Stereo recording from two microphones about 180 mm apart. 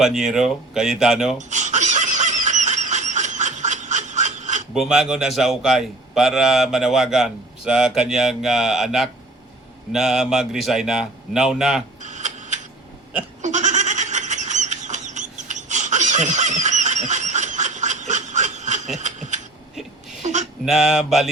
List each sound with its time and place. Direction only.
0.0 s a man's voice: centre (ahead or behind)
1.4 s a sound: 40° right (ahead or behind)
4.7 s a man's voice: centre (ahead or behind)
12.0 s tick-tock: 40° right (ahead or behind)
13.4 s goat: 40° right (ahead or behind)
18.9 s a sound: 40° right (ahead or behind)
19.7 s whimper: centre (ahead or behind)
20.2 s a sound: 40° right (ahead or behind)
20.7 s a man's voice: centre (ahead or behind)